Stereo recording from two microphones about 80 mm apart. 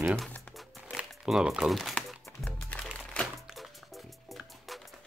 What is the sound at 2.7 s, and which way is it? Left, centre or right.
Music, centre.